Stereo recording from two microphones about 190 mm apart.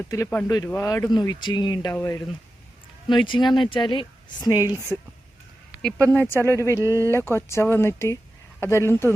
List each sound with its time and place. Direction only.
0.1 s a woman's voice: 15° left (ahead or behind)
4.9 s speech: 5° left (ahead or behind)
6.1 s speech: 10° left (ahead or behind)
6.8 s speech: 15° right (ahead or behind)
7.1 s speech: 10° left (ahead or behind)